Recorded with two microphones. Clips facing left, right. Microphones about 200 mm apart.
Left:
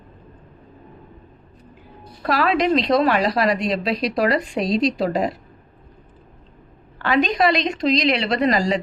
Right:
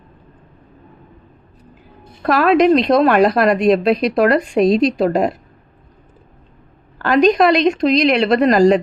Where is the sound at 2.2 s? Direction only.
50° right (ahead or behind).